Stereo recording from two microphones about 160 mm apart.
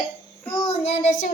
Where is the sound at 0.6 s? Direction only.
40° left (ahead or behind).